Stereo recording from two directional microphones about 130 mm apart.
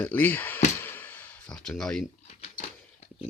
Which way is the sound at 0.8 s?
15° left (ahead or behind).